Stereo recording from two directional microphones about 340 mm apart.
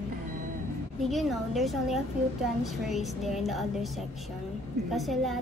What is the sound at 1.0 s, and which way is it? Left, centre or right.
A woman's voice, centre.